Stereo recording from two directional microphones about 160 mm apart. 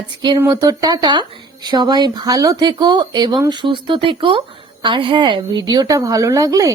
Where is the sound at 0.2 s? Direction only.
25° right (ahead or behind).